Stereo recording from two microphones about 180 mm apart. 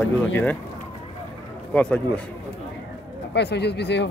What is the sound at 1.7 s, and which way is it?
Speech, 5° left (ahead or behind).